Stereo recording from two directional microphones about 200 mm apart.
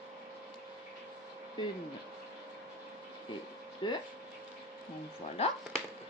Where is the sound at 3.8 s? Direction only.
25° left (ahead or behind).